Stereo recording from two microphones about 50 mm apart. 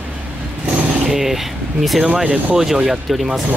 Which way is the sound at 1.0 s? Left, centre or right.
Centre.